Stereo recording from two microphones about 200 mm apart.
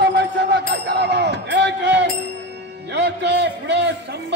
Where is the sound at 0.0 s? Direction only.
60° right (ahead or behind).